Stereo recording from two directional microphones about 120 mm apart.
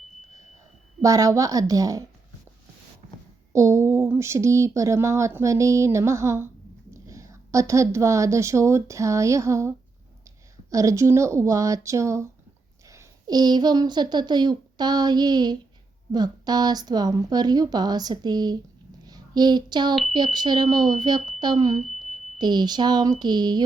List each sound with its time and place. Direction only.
1.0 s speech: 30° right (ahead or behind)
3.5 s a woman's voice: 25° right (ahead or behind)
21.8 s a sound: centre (ahead or behind)
22.4 s a woman's voice: 35° right (ahead or behind)